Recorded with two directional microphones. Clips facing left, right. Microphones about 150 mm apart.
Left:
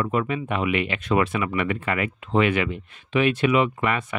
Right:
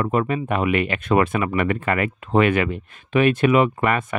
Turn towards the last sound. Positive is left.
turn(degrees=-50)  # may be behind; listen again after turning